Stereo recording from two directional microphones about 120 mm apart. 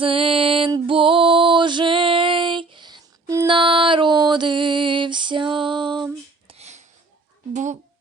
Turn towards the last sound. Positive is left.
turn(degrees=-80)